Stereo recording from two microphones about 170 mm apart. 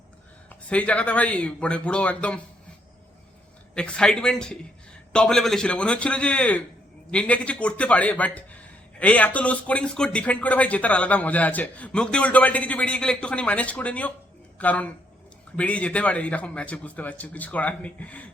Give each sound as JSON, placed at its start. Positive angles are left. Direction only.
{"t": 0.7, "sound": "speech", "side_deg": 5}
{"t": 3.8, "sound": "a man's voice", "side_deg": 5}